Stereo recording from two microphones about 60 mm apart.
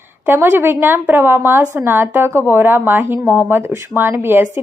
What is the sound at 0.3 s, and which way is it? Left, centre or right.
A woman's voice, right.